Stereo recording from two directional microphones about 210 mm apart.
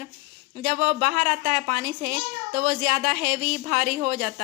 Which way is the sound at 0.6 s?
40° right (ahead or behind).